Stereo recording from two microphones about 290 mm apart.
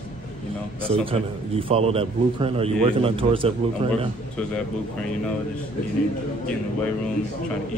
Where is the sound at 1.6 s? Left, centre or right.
Centre.